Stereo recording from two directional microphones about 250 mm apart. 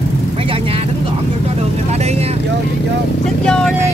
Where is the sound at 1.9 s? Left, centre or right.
Right.